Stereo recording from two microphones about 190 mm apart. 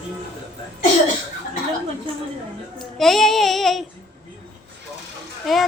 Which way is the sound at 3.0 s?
Centre (ahead or behind).